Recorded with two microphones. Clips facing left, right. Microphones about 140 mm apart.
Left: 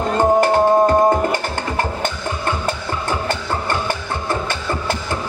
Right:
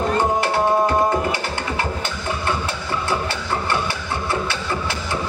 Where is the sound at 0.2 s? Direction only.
45° left (ahead or behind).